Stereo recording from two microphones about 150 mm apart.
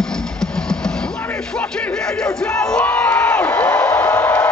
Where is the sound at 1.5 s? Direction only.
10° left (ahead or behind).